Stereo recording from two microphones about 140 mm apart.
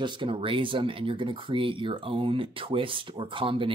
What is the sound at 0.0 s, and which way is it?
Speech, 40° right (ahead or behind).